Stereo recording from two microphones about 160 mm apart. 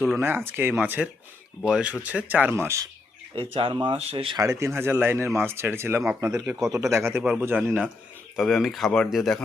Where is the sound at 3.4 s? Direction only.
35° right (ahead or behind).